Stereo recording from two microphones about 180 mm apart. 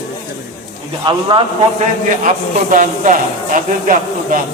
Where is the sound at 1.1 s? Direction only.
30° right (ahead or behind).